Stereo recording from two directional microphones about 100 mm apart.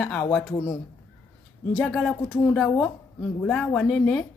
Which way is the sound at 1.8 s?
Centre (ahead or behind).